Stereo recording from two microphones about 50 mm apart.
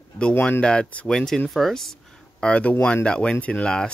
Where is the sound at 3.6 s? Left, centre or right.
Centre.